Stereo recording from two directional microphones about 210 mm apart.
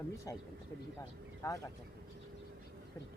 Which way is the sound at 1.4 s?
15° left (ahead or behind).